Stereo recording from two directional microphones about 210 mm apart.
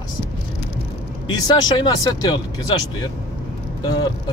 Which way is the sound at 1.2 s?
20° left (ahead or behind).